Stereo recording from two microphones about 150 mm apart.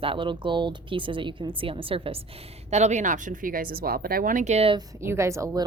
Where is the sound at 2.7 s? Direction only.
50° right (ahead or behind).